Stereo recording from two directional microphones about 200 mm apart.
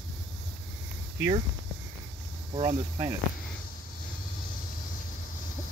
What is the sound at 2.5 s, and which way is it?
Speech, 20° right (ahead or behind).